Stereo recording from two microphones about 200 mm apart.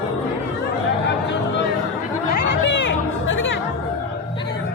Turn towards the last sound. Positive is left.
turn(degrees=70)  # may be behind; listen again after turning